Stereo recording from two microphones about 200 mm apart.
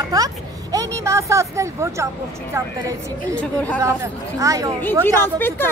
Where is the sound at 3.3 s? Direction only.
5° left (ahead or behind).